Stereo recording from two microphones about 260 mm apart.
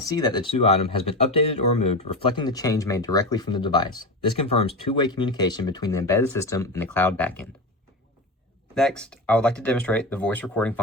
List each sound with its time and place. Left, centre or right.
0.0 s speech: centre
8.7 s speech: centre